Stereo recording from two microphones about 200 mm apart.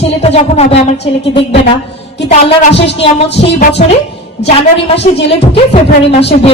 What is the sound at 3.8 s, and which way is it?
Speech, 40° left (ahead or behind).